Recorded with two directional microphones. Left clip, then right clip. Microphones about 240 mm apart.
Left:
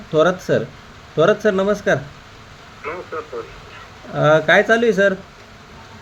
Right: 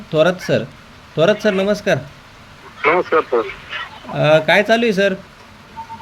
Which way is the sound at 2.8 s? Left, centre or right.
Right.